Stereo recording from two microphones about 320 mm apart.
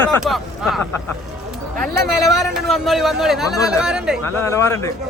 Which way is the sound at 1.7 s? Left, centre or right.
Right.